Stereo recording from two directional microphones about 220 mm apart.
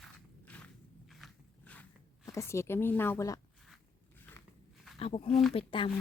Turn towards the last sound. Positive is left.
turn(degrees=25)  # may be behind; listen again after turning